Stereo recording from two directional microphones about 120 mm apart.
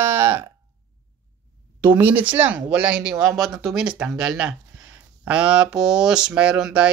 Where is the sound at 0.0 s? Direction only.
20° right (ahead or behind).